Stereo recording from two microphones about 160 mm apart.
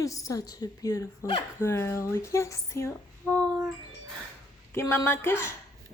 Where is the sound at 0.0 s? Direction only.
20° left (ahead or behind).